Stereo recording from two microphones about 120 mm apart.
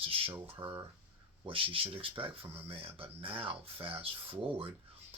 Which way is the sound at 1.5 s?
50° right (ahead or behind).